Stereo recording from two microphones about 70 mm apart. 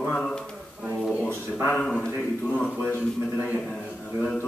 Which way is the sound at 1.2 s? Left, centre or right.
Centre.